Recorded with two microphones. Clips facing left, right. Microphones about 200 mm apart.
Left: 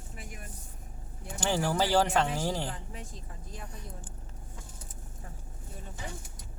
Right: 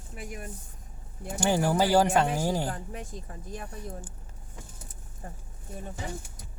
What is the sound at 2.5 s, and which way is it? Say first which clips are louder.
Speech: right 5 dB; 45° right (ahead or behind).